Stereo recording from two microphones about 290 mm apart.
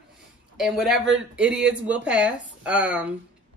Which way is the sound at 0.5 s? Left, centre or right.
Centre.